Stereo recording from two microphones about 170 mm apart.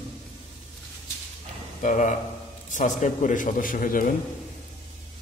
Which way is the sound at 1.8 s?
45° left (ahead or behind).